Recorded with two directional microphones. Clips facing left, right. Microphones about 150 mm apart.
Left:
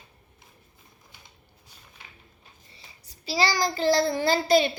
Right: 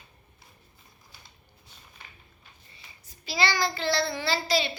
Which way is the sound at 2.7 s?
35° left (ahead or behind).